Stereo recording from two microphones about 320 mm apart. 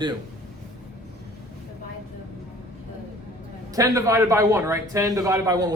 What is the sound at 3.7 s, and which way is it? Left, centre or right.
A man's voice, centre.